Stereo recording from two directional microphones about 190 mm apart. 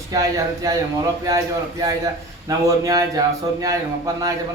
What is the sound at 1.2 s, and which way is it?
A man's voice, 20° right (ahead or behind).